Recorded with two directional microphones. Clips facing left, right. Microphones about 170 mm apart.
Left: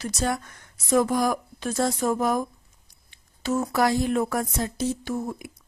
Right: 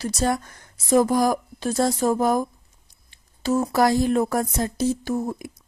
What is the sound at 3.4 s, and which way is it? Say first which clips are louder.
A woman's voice: right 3 dB; 35° right (ahead or behind).